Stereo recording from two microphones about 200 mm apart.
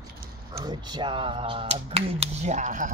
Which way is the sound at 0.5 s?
20° right (ahead or behind).